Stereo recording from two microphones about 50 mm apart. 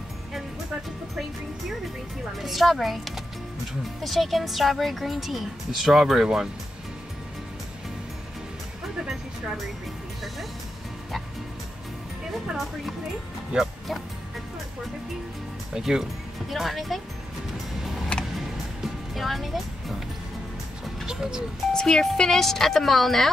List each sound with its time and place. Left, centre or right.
2.2 s speech: centre
9.0 s music: centre
12.3 s speech: centre
15.7 s speech: centre
17.8 s music: centre
19.1 s speech: centre
21.0 s speech: centre
21.7 s speech: centre